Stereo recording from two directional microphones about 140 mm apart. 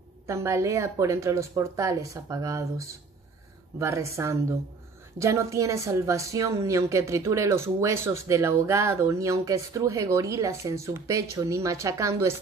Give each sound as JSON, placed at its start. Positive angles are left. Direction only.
{"t": 0.3, "sound": "a woman's voice", "side_deg": -20}